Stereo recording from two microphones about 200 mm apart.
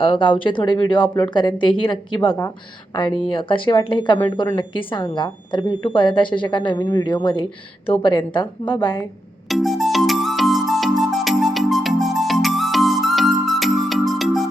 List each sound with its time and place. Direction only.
0.0 s speech: 25° left (ahead or behind)
9.5 s music: centre (ahead or behind)